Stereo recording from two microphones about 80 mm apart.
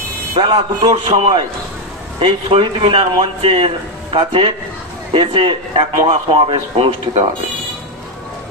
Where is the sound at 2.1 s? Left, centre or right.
Right.